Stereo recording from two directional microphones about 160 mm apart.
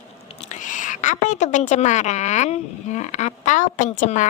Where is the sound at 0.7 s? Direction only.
50° left (ahead or behind).